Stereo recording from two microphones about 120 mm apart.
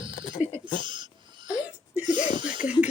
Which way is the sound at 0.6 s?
40° right (ahead or behind).